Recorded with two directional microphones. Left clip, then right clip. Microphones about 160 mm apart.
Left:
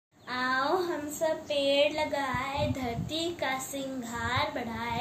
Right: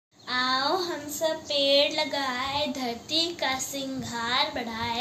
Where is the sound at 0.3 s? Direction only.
20° left (ahead or behind).